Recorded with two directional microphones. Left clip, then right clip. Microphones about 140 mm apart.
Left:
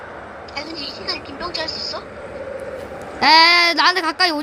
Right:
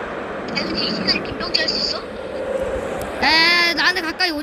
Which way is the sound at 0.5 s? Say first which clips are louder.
Right 6 dB; 90° right.